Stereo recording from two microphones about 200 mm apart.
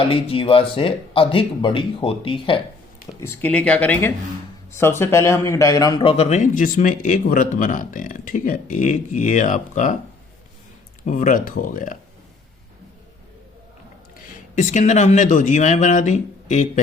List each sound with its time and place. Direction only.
0.1 s speech: 25° left (ahead or behind)
3.2 s a man's voice: 10° left (ahead or behind); by 10.0 s 40° left (ahead or behind)
11.0 s a man's voice: 40° left (ahead or behind)
14.5 s a man's voice: 40° left (ahead or behind)